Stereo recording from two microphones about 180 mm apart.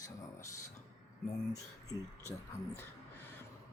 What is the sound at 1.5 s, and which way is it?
Speech, 20° left (ahead or behind).